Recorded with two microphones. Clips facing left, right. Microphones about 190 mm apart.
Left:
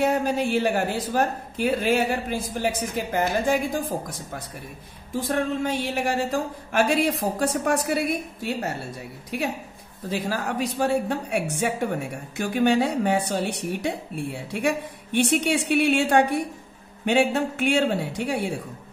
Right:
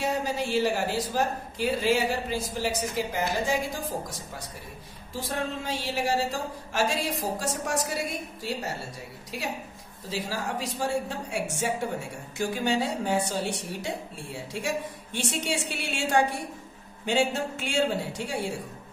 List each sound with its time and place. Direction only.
0.0 s speech: 55° left (ahead or behind)
10.0 s speech: 55° left (ahead or behind)